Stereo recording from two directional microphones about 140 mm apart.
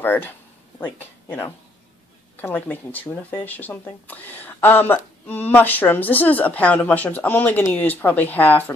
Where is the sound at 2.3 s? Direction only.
15° left (ahead or behind).